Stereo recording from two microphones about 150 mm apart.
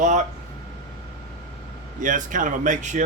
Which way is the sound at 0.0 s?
55° right (ahead or behind).